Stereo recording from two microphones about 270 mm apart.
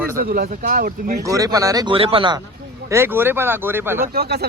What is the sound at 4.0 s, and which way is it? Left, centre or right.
Speech, right.